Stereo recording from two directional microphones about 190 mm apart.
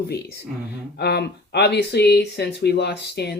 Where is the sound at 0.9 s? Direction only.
60° left (ahead or behind).